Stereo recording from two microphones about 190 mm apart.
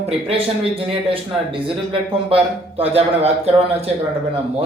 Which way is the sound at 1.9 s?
30° right (ahead or behind).